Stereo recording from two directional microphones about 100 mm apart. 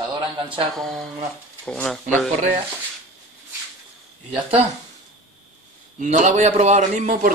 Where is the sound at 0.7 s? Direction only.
5° left (ahead or behind).